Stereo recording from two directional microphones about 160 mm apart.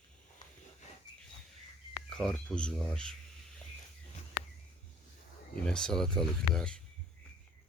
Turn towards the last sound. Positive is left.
turn(degrees=5)  # may be behind; listen again after turning